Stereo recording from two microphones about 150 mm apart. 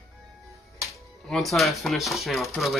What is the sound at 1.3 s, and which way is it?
Speech, centre (ahead or behind).